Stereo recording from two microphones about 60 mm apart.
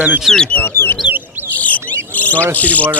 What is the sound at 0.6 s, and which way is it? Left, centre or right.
Speech, left.